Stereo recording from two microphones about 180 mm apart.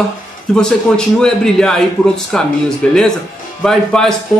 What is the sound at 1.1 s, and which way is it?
A man's voice, 5° left (ahead or behind).